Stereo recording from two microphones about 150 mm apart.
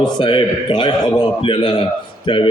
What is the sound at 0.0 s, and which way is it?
A man's voice, 30° left (ahead or behind).